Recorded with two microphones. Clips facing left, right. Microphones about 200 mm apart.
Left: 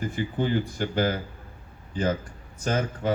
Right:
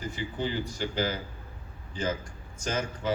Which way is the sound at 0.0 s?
50° left (ahead or behind).